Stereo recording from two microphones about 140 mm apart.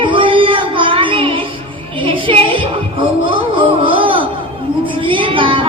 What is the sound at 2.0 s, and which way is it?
Music, 40° right (ahead or behind).